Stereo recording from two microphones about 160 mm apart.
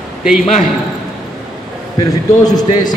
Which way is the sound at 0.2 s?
5° right (ahead or behind).